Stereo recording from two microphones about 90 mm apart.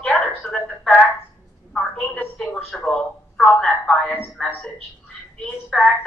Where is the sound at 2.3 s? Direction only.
5° left (ahead or behind).